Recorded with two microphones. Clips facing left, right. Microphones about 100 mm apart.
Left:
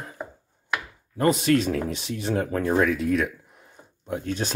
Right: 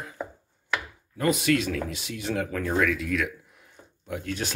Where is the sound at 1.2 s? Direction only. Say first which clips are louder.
Left 3 dB; 35° left (ahead or behind).